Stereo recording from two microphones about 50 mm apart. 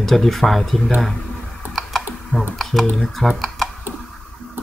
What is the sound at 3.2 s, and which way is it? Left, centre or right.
Speech, centre.